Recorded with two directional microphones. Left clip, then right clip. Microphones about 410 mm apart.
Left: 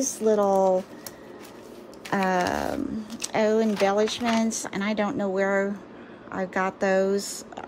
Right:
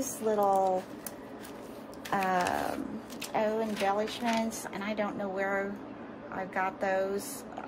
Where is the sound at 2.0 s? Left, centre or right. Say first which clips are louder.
Left 4 dB; left.